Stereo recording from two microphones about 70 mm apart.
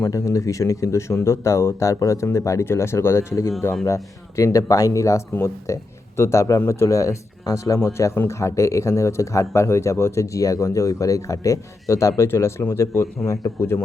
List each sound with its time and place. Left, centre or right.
0.0 s a man's voice: left